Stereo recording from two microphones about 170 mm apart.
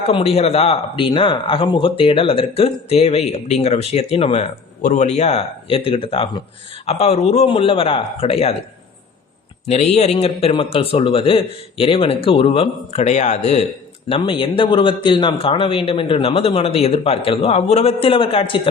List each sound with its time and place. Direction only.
0.1 s speech: 35° left (ahead or behind)
6.8 s speech: 40° left (ahead or behind)
9.6 s speech: 40° left (ahead or behind)
14.1 s speech: 30° left (ahead or behind)